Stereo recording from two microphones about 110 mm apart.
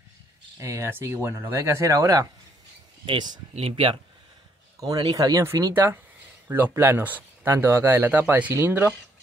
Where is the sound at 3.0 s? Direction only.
45° right (ahead or behind).